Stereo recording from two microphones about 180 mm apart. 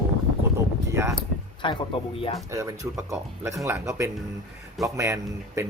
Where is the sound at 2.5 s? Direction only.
15° right (ahead or behind).